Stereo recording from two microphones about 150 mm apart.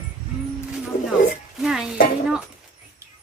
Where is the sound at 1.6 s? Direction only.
5° right (ahead or behind).